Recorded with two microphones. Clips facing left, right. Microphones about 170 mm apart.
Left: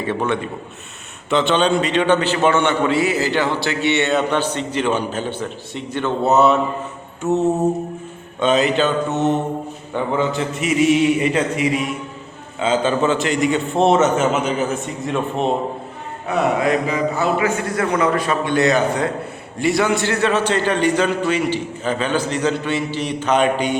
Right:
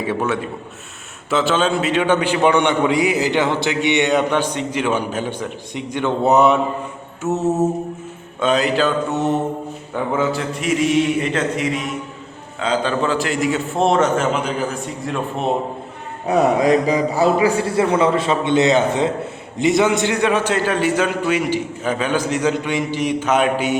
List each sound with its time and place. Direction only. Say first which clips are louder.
0.0 s a man's voice: even; 5° right (ahead or behind)
7.2 s a man's voice: left 1 dB; 5° right (ahead or behind)
16.2 s a man's voice: right 3 dB; 35° right (ahead or behind); by 23.7 s 5° right (ahead or behind)